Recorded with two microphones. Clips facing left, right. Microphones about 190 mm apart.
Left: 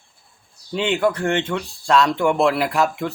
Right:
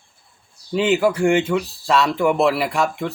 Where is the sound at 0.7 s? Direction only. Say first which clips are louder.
Right 3 dB; 5° right (ahead or behind).